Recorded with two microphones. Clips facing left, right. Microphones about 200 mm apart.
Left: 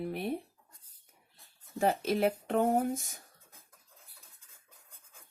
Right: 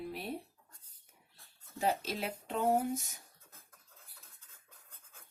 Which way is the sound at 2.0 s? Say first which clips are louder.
Left 10 dB; 55° left (ahead or behind).